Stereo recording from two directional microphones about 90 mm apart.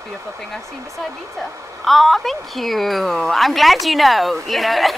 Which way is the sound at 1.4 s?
Centre (ahead or behind).